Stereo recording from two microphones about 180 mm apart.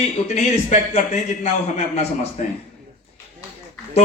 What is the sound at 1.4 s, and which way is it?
Speech, 40° left (ahead or behind).